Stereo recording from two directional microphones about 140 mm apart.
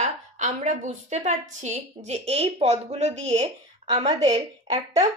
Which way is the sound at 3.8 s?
30° right (ahead or behind).